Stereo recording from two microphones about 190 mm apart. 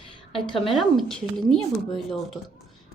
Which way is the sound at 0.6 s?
Centre (ahead or behind).